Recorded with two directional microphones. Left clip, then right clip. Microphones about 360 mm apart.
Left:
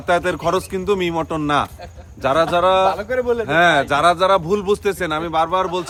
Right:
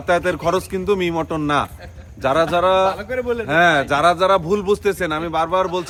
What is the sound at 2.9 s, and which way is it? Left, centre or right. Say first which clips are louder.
Speech: left 3 dB; centre.